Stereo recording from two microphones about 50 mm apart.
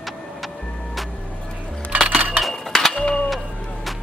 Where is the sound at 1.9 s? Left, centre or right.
Right.